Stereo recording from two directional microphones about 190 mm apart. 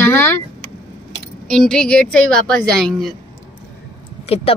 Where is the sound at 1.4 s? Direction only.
5° left (ahead or behind).